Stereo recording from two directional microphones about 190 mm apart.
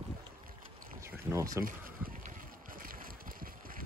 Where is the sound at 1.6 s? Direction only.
45° right (ahead or behind).